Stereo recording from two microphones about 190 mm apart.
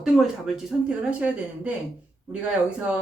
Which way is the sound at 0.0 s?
Centre (ahead or behind).